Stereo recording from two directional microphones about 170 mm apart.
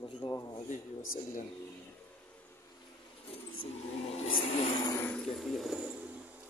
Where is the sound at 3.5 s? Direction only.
35° left (ahead or behind).